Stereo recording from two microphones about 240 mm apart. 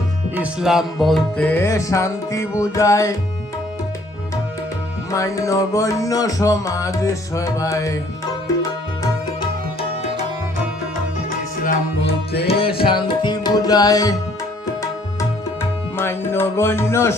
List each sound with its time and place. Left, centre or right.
0.3 s music: centre
5.1 s music: centre
12.5 s tabla: left
16.0 s music: centre